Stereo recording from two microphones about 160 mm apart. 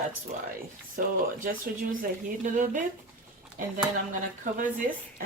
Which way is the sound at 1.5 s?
60° right (ahead or behind).